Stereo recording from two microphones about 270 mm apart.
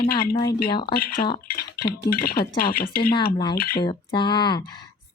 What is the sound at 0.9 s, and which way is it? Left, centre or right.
Speech, left.